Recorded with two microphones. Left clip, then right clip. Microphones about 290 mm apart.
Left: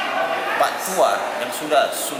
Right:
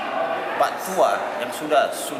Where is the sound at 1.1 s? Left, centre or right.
Centre.